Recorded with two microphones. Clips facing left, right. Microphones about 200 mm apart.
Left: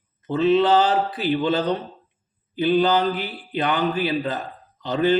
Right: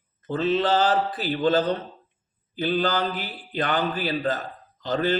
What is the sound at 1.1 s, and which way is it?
A man's voice, 45° right (ahead or behind).